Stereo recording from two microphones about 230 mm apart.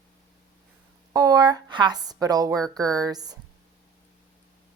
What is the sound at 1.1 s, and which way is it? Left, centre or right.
A woman's voice, centre.